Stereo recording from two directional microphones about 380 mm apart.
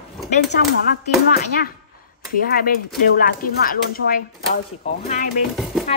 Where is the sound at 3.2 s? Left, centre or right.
Left.